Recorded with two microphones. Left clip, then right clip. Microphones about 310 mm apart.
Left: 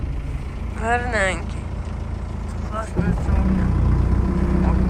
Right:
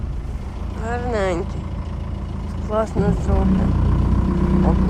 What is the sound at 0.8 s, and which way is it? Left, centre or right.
Speech, centre.